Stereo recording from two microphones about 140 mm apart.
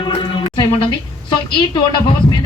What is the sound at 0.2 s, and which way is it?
A woman's voice, 35° left (ahead or behind).